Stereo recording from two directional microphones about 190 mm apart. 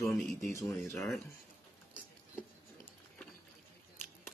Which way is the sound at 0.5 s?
15° left (ahead or behind).